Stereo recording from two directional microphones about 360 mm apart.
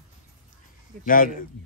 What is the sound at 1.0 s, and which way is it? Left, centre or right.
Speech, left.